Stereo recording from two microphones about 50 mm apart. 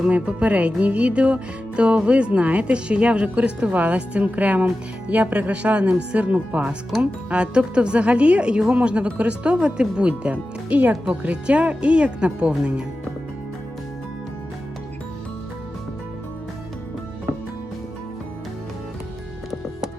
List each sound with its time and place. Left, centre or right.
0.0 s speech: right